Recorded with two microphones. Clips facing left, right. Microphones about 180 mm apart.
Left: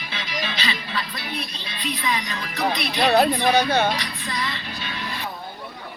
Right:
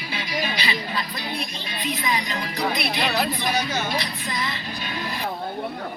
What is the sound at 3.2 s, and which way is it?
Speech, 60° left (ahead or behind).